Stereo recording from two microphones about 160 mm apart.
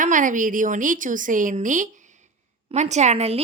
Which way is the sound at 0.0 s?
55° right (ahead or behind).